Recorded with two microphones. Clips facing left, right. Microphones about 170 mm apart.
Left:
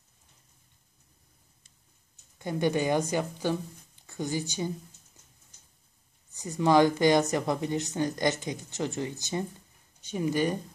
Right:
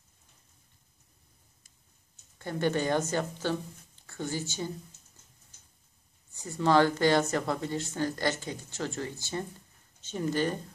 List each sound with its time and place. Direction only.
2.3 s speech: 15° left (ahead or behind)
6.3 s speech: 15° left (ahead or behind)